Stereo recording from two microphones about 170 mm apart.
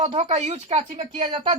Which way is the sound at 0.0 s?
40° right (ahead or behind).